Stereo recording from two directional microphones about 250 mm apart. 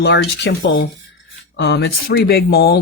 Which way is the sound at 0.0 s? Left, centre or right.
Left.